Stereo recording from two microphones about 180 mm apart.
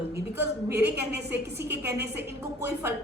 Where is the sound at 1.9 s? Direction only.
65° right (ahead or behind).